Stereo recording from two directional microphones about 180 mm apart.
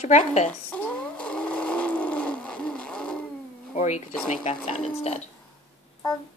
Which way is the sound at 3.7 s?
40° left (ahead or behind).